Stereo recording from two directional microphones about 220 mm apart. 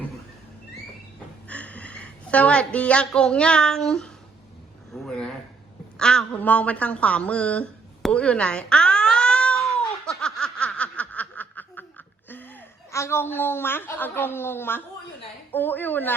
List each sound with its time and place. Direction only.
1.5 s a woman's voice: 5° left (ahead or behind)
4.9 s a sound: 5° left (ahead or behind)
15.5 s a woman's voice: 10° left (ahead or behind)